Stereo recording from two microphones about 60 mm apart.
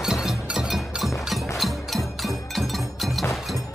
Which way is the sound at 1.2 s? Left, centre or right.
Centre.